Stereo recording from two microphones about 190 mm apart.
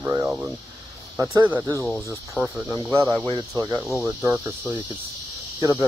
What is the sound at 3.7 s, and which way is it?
Speech, 10° right (ahead or behind).